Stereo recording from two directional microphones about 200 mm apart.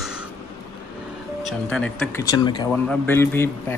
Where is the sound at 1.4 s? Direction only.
Centre (ahead or behind).